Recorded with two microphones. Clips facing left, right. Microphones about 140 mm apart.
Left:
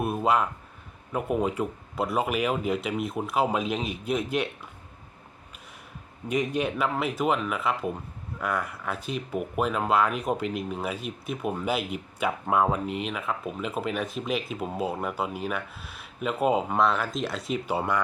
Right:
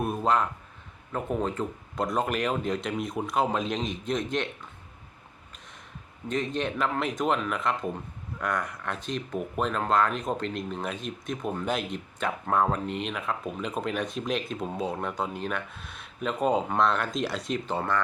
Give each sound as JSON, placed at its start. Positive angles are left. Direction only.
{"t": 0.0, "sound": "speech", "side_deg": 5}
{"t": 6.2, "sound": "speech", "side_deg": 10}